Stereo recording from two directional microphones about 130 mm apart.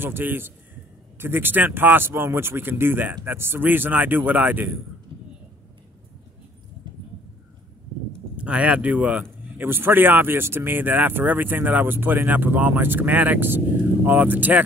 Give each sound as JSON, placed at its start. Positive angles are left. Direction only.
{"t": 0.0, "sound": "speech", "side_deg": -15}
{"t": 8.4, "sound": "speech", "side_deg": -10}